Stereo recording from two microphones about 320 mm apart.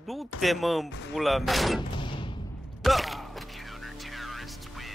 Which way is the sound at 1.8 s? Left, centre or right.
Centre.